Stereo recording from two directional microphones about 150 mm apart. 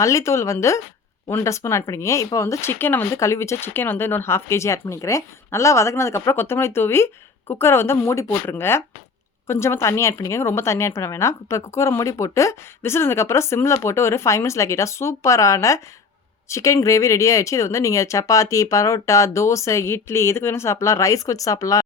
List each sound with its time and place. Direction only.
0.0 s a woman's voice: 20° left (ahead or behind)